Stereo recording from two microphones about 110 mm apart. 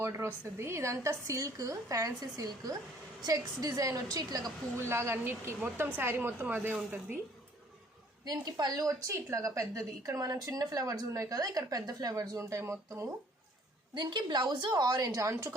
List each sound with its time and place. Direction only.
0.0 s a woman's voice: 20° right (ahead or behind)
4.8 s a woman's voice: 25° right (ahead or behind)
8.2 s a woman's voice: 35° right (ahead or behind)
13.9 s a woman's voice: 45° right (ahead or behind); by 15.5 s 30° right (ahead or behind)